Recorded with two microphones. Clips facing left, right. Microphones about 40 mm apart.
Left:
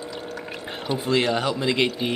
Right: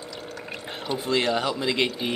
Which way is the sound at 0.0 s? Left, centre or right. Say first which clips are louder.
Left 4 dB; centre.